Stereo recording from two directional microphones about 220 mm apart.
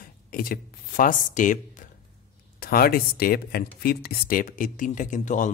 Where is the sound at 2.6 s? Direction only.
45° left (ahead or behind).